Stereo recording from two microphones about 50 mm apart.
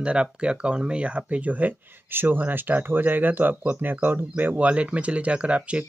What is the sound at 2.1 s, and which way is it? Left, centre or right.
Speech, right.